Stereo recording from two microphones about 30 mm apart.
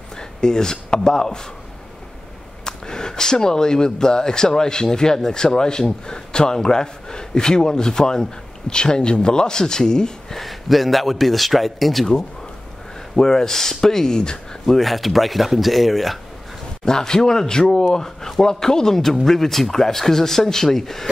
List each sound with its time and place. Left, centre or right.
0.2 s speech: left
2.6 s speech: left
10.3 s speech: centre
13.1 s speech: centre
14.8 s speech: centre
16.8 s speech: left